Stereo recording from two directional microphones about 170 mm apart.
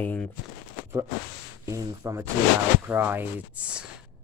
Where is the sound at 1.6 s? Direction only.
20° right (ahead or behind).